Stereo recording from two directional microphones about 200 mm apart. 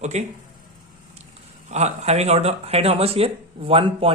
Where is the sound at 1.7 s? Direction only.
35° right (ahead or behind).